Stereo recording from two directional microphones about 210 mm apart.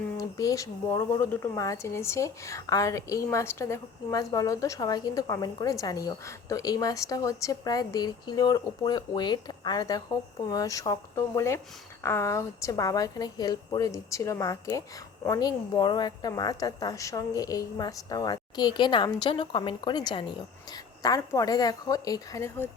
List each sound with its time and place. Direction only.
0.2 s speech: 15° left (ahead or behind)